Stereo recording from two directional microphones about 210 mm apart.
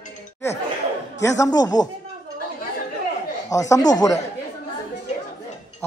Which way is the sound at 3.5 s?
15° left (ahead or behind).